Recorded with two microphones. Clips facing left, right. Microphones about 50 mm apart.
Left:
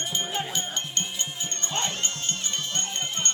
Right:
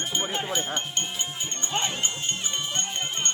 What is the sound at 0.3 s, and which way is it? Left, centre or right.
Music, centre.